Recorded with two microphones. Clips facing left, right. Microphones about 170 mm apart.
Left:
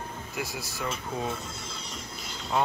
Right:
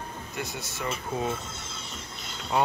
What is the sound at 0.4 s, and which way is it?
Speech, centre (ahead or behind).